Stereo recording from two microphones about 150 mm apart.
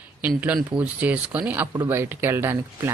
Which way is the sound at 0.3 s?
10° right (ahead or behind).